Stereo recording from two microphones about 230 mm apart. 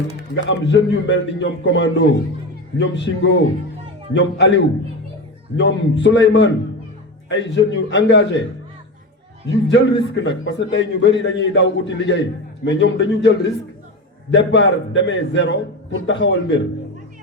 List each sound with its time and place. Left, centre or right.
0.2 s a man's voice: left
9.5 s a man's voice: left